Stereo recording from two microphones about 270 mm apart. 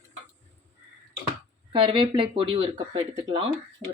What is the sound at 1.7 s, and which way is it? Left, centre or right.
Speech, centre.